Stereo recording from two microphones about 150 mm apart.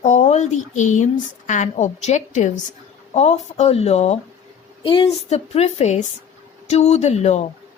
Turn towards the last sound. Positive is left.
turn(degrees=50)  # may be behind; listen again after turning